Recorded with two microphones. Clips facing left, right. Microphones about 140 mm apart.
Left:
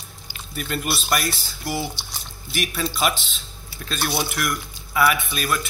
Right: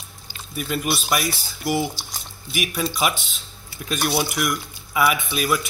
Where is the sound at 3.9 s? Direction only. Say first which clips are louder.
Right 3 dB; 10° right (ahead or behind).